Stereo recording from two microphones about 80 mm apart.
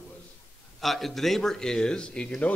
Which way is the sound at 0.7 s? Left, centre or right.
Centre.